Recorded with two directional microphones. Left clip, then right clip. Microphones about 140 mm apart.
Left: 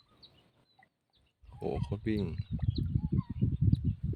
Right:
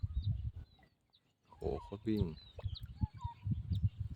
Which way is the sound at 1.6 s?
10° left (ahead or behind).